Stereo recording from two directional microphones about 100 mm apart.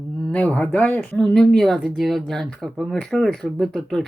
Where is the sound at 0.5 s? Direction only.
15° left (ahead or behind).